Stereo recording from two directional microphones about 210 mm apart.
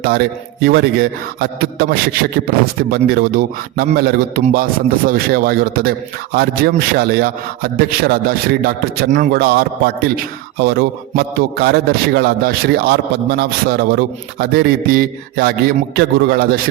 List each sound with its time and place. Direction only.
0.0 s a man's voice: 50° right (ahead or behind)